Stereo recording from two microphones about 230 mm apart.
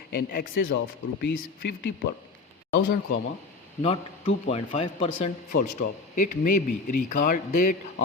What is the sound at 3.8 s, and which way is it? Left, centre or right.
Speech, left.